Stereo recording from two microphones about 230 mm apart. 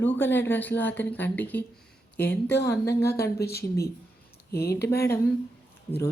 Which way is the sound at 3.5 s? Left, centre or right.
Left.